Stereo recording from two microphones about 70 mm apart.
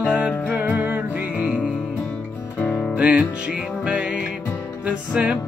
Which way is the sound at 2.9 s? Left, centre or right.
Centre.